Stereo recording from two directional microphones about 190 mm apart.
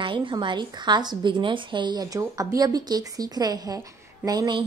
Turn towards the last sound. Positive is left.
turn(degrees=-20)  # may be behind; listen again after turning